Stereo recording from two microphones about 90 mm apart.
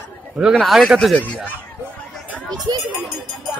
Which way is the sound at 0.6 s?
Centre (ahead or behind).